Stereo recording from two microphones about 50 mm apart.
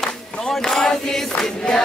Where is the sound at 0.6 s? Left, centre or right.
Centre.